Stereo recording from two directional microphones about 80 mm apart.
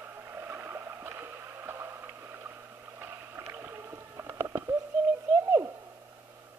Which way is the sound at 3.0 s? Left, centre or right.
Right.